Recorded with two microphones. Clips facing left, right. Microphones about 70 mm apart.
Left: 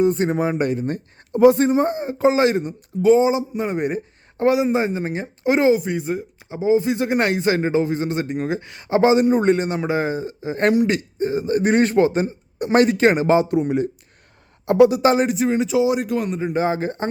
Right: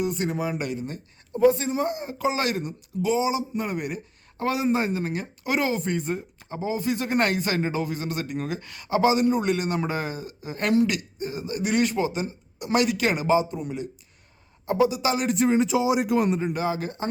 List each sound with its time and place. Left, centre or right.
0.0 s speech: left
3.0 s speech: left
4.4 s speech: centre
5.7 s speech: centre
6.7 s speech: left
9.7 s speech: centre
10.0 s speech: left
13.2 s speech: left
14.8 s speech: left
15.3 s speech: centre
16.0 s speech: centre
16.5 s speech: left